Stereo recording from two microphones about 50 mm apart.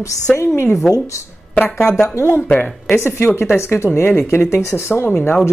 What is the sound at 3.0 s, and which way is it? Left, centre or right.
Speech, left.